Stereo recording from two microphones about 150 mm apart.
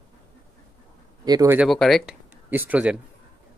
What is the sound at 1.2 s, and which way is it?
Speech, 25° right (ahead or behind).